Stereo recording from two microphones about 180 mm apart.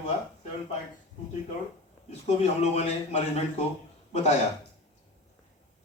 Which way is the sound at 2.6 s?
35° left (ahead or behind).